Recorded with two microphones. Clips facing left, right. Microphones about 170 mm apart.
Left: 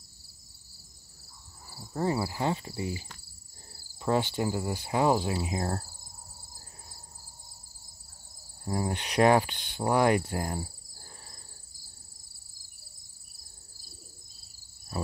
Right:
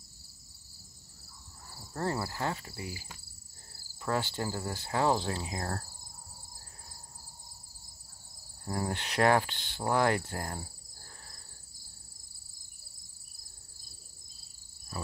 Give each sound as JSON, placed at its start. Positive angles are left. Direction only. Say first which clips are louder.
{"t": 1.8, "sound": "speech", "louder": "left 4 dB", "side_deg": 10}
{"t": 4.0, "sound": "cricket", "louder": "left 5 dB", "side_deg": 20}
{"t": 8.6, "sound": "cricket", "louder": "left 3 dB", "side_deg": 15}